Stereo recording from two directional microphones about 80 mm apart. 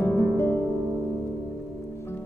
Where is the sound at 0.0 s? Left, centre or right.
Left.